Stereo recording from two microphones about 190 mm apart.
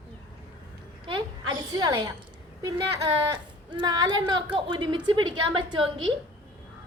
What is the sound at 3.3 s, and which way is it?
A woman's voice, 25° right (ahead or behind).